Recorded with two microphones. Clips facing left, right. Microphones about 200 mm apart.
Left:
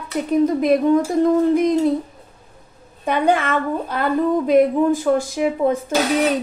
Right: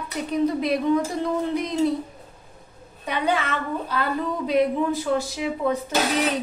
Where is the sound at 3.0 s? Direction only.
50° left (ahead or behind).